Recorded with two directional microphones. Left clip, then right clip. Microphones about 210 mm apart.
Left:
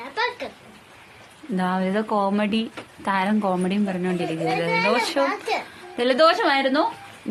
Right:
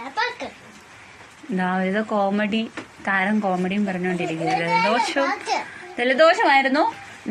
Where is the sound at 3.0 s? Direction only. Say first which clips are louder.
Right 1 dB; 15° left (ahead or behind).